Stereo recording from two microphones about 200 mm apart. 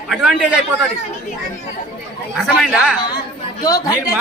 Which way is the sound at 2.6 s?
5° right (ahead or behind).